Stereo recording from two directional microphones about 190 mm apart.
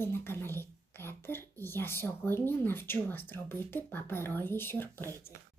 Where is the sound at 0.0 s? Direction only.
10° left (ahead or behind).